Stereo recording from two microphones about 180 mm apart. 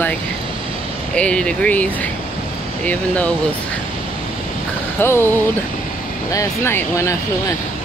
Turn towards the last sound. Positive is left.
turn(degrees=15)  # may be behind; listen again after turning